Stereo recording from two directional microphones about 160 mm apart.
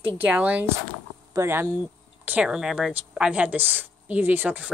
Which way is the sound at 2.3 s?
5° right (ahead or behind).